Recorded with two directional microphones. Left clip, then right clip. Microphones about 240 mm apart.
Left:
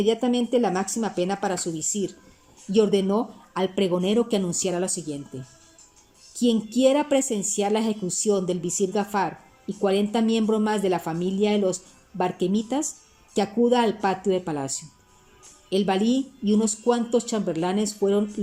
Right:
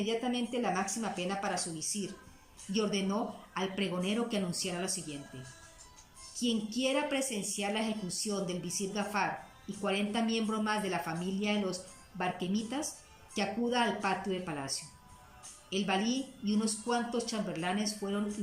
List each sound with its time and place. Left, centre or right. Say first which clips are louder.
0.0 s a woman's voice: left 11 dB; left
6.3 s a woman's voice: left 11 dB; left